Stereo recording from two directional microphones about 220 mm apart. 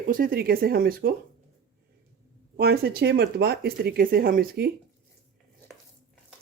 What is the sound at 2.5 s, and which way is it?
Speech, 45° right (ahead or behind).